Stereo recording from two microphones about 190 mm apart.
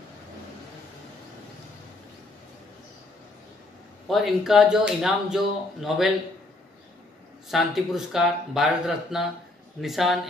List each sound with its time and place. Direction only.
4.1 s speech: centre (ahead or behind)
7.4 s speech: centre (ahead or behind)